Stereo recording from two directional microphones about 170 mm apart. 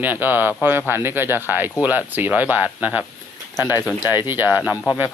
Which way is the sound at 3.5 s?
20° left (ahead or behind).